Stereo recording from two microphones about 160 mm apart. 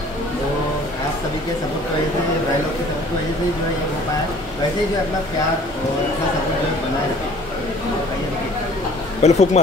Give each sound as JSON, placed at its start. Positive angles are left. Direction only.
{"t": 9.2, "sound": "speech", "side_deg": 45}